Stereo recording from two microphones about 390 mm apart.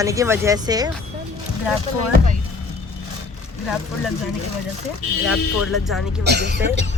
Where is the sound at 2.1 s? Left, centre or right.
Centre.